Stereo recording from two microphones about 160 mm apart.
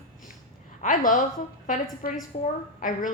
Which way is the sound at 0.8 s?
55° left (ahead or behind).